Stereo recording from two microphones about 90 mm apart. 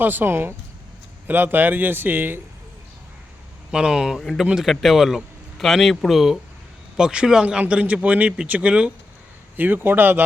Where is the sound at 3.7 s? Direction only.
10° right (ahead or behind).